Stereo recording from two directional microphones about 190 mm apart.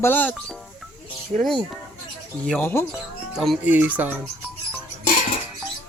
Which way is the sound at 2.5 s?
10° left (ahead or behind).